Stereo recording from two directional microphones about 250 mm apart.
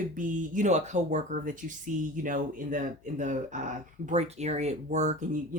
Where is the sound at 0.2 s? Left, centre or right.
Right.